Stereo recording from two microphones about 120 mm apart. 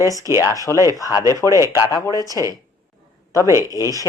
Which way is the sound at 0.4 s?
30° left (ahead or behind).